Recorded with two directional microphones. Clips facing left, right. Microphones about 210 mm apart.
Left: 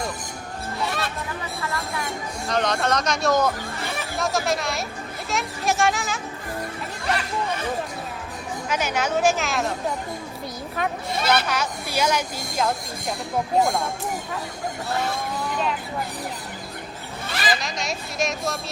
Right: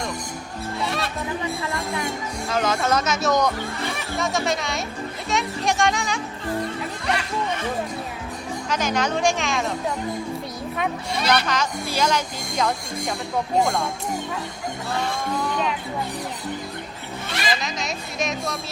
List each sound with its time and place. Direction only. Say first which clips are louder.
0.8 s music: right 1 dB; centre (ahead or behind)
2.5 s speech: right 1 dB; 5° right (ahead or behind)
8.7 s speech: right 1 dB; 10° left (ahead or behind)
11.3 s speech: right 1 dB; 5° left (ahead or behind)
17.4 s speech: left 1 dB; centre (ahead or behind)